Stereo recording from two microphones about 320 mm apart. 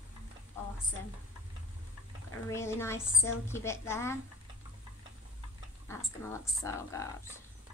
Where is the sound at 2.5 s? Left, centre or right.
Centre.